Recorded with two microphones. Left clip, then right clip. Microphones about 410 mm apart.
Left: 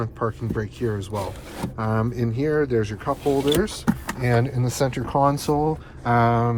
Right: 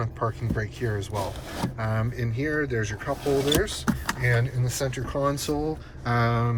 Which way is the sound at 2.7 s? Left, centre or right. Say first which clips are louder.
Left 6 dB; centre.